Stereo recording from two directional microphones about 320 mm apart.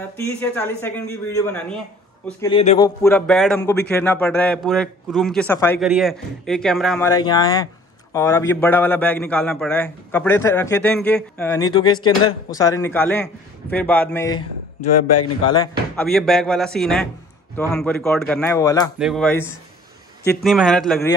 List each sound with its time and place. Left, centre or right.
0.4 s a man's voice: centre
14.4 s speech: left
15.5 s a man's voice: centre
18.9 s a man's voice: centre
20.4 s a man's voice: centre